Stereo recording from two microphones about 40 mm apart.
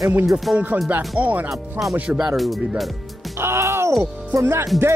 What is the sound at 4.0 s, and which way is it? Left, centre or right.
Speech, right.